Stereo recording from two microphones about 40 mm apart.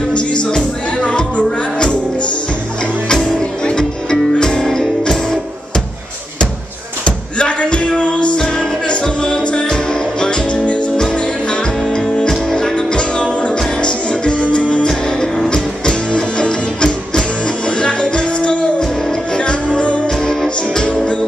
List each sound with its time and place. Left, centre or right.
0.4 s music: left
3.1 s music: centre
7.1 s a sound: left
8.4 s music: left
11.5 s music: centre
14.9 s music: centre